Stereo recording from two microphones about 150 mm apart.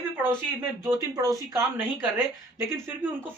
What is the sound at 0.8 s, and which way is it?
Speech, 20° right (ahead or behind).